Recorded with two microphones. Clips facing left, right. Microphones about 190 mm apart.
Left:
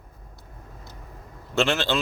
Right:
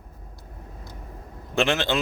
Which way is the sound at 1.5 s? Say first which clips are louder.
Even; 15° right (ahead or behind).